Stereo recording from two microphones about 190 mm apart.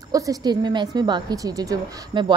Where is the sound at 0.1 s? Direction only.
20° right (ahead or behind).